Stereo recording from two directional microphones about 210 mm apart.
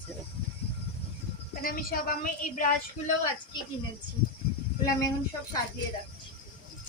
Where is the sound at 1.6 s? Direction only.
45° left (ahead or behind).